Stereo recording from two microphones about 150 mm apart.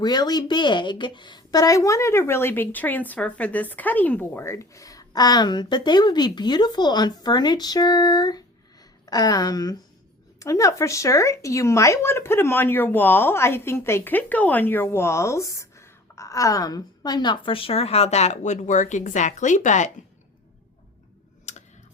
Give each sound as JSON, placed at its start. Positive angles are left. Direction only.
{"t": 0.0, "sound": "speech", "side_deg": 30}
{"t": 21.5, "sound": "computer keyboard", "side_deg": 50}